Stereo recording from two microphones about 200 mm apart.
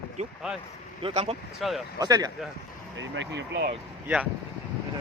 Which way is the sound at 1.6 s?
Centre (ahead or behind).